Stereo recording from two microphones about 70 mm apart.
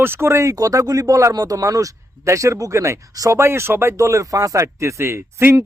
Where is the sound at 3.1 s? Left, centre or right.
Right.